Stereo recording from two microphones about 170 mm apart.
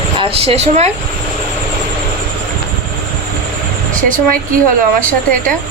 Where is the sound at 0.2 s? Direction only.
35° right (ahead or behind).